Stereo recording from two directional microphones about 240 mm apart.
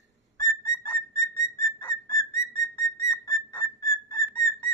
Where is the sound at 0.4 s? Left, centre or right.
Centre.